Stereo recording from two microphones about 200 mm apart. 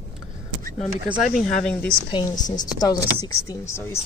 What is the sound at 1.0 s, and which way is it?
Speech, centre (ahead or behind).